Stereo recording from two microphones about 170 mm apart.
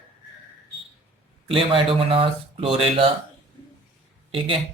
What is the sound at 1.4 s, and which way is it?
Speech, 30° right (ahead or behind).